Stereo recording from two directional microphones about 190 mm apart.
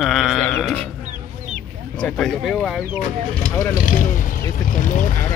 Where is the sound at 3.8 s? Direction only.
45° left (ahead or behind).